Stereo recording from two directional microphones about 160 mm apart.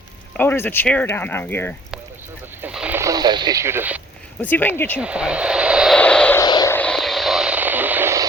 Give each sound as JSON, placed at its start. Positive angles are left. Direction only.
{"t": 0.3, "sound": "speech", "side_deg": 15}
{"t": 2.6, "sound": "radio", "side_deg": -10}
{"t": 3.0, "sound": "radio", "side_deg": -25}
{"t": 4.4, "sound": "speech", "side_deg": 10}
{"t": 4.9, "sound": "speech", "side_deg": -5}
{"t": 6.0, "sound": "vehicle", "side_deg": 5}
{"t": 6.4, "sound": "vehicle", "side_deg": 25}
{"t": 6.7, "sound": "vehicle", "side_deg": 5}